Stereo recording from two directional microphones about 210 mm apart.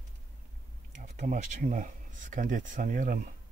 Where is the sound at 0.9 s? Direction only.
35° right (ahead or behind).